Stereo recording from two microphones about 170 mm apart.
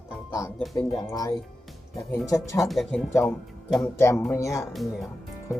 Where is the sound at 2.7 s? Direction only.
Centre (ahead or behind).